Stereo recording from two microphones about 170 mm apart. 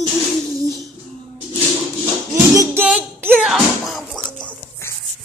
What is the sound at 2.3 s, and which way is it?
Music, 20° right (ahead or behind).